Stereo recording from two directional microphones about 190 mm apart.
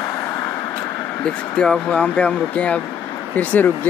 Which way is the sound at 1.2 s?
5° left (ahead or behind).